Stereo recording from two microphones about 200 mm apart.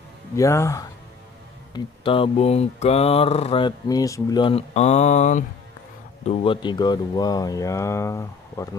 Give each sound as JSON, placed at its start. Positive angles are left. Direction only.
{"t": 0.4, "sound": "speech", "side_deg": 15}
{"t": 1.7, "sound": "mantra", "side_deg": 25}
{"t": 6.2, "sound": "speech", "side_deg": 25}